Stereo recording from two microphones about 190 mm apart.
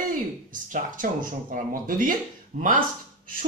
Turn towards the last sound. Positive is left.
turn(degrees=-45)  # may be behind; listen again after turning